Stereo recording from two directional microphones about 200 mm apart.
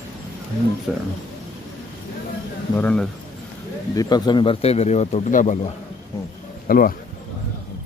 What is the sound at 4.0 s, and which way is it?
Speech, 20° left (ahead or behind).